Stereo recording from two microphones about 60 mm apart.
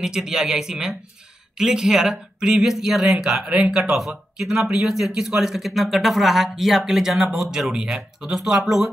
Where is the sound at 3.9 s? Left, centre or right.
Centre.